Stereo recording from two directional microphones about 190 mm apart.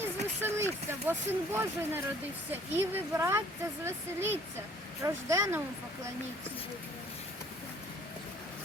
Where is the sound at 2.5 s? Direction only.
10° right (ahead or behind).